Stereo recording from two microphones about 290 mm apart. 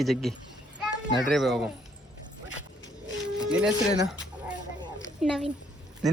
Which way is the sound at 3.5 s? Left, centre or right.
Centre.